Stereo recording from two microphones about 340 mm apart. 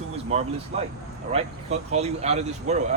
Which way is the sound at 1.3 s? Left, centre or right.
Centre.